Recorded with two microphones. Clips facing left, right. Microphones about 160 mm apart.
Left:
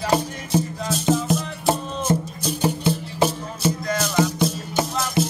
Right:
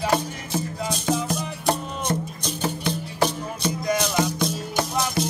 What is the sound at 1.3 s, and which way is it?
Music, 5° left (ahead or behind).